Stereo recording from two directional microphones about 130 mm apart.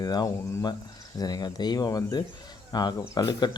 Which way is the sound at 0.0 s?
30° left (ahead or behind).